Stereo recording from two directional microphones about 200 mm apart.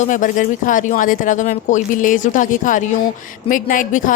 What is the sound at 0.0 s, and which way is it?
Speech, 40° left (ahead or behind).